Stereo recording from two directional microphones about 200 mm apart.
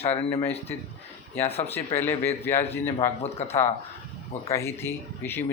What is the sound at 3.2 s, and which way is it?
Speech, 30° left (ahead or behind).